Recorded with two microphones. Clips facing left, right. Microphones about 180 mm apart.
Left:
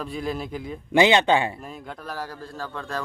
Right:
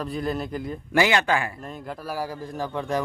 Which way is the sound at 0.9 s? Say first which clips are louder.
Left 4 dB; 20° left (ahead or behind).